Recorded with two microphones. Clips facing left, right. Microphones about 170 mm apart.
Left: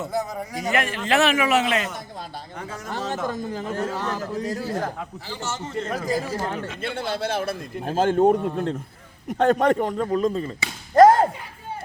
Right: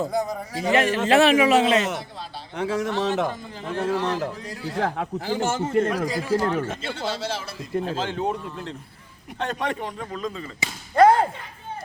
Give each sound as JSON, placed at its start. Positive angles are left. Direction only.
{"t": 0.5, "sound": "a man's voice", "side_deg": -30}
{"t": 2.6, "sound": "speech", "side_deg": -70}
{"t": 3.2, "sound": "a man's voice", "side_deg": 45}
{"t": 4.8, "sound": "speech", "side_deg": -70}
{"t": 5.3, "sound": "a man's voice", "side_deg": -50}
{"t": 6.8, "sound": "a man's voice", "side_deg": 55}
{"t": 10.9, "sound": "a sound", "side_deg": 40}